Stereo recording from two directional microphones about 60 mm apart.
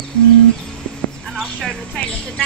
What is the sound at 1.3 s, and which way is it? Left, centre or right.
Speech, centre.